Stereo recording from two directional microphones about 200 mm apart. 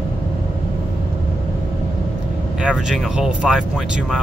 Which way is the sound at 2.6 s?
Centre (ahead or behind).